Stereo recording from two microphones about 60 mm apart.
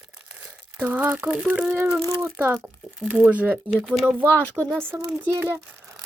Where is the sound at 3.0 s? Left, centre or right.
Right.